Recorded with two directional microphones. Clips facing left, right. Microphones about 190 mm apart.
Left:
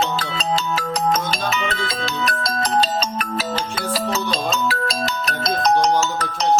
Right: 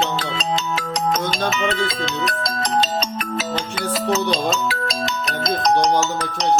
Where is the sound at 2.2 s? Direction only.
20° right (ahead or behind).